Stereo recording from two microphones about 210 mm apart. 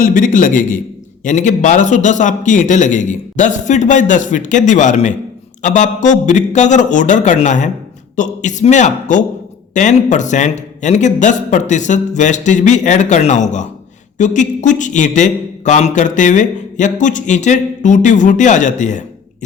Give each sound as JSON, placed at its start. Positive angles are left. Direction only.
{"t": 0.0, "sound": "speech", "side_deg": 40}